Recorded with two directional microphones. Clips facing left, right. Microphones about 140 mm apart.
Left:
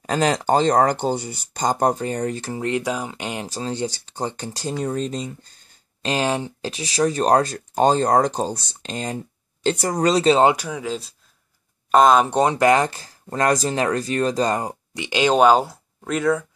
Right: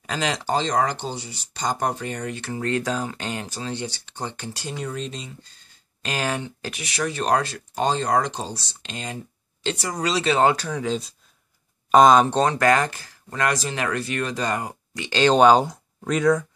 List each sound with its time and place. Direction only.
0.0 s speech: 45° left (ahead or behind)
2.6 s speech: 15° left (ahead or behind)
3.4 s speech: 35° left (ahead or behind)
6.0 s speech: 25° left (ahead or behind); by 10.3 s 45° left (ahead or behind)
10.3 s speech: 15° left (ahead or behind); by 12.3 s centre (ahead or behind)
12.3 s speech: 15° left (ahead or behind); by 14.8 s 30° left (ahead or behind)
15.0 s speech: 15° left (ahead or behind)